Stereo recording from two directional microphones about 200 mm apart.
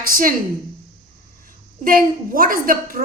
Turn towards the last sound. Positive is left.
turn(degrees=-45)  # may be behind; listen again after turning